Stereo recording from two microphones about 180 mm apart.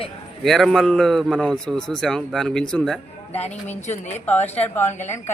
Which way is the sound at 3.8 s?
40° left (ahead or behind).